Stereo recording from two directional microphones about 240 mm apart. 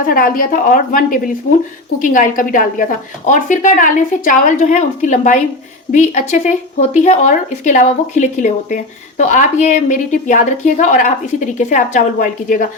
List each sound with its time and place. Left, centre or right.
0.0 s speech: left